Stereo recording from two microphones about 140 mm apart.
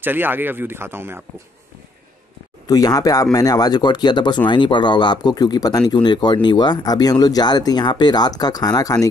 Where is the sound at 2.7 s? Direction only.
25° left (ahead or behind).